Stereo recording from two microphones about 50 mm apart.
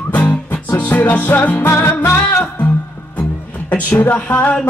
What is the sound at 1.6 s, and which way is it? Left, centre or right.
Music, left.